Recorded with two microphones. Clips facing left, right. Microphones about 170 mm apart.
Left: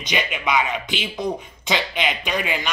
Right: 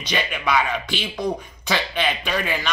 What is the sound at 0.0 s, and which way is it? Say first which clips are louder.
Speech: even; 15° left (ahead or behind).